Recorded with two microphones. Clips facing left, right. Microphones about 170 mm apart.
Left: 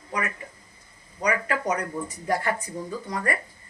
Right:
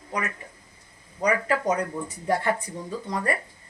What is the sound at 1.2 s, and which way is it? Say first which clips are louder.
Speech: right 2 dB; 30° right (ahead or behind).